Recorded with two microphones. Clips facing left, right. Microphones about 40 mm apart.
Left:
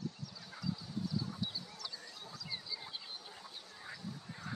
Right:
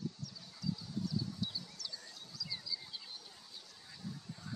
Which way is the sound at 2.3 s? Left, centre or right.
Left.